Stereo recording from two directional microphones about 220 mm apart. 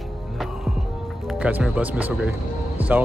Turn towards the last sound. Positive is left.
turn(degrees=-5)  # may be behind; listen again after turning